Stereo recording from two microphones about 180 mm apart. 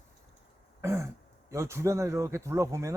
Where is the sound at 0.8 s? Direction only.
15° right (ahead or behind).